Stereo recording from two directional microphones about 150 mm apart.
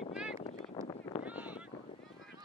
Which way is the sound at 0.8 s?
25° left (ahead or behind).